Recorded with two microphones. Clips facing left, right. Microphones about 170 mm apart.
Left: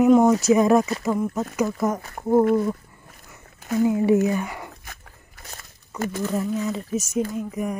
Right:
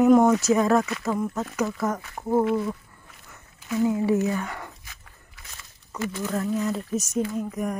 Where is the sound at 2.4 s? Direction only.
45° left (ahead or behind).